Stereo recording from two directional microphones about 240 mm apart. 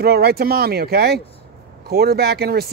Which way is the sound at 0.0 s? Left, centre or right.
Right.